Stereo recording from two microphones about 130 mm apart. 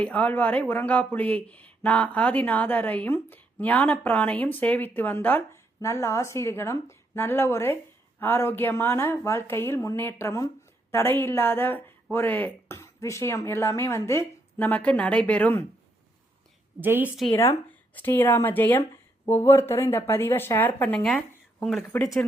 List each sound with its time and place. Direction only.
0.0 s speech: 10° left (ahead or behind)
16.8 s a woman's voice: 15° right (ahead or behind)
17.3 s speech: 20° left (ahead or behind); by 21.8 s 5° left (ahead or behind)